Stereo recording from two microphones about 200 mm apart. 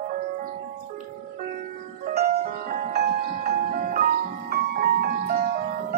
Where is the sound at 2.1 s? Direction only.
50° right (ahead or behind).